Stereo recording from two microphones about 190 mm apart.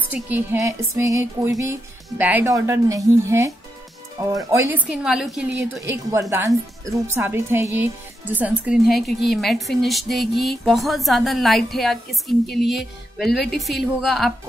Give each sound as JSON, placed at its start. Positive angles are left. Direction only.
{"t": 0.1, "sound": "speech", "side_deg": -10}
{"t": 4.8, "sound": "a woman's voice", "side_deg": -5}
{"t": 5.8, "sound": "a woman's voice", "side_deg": -15}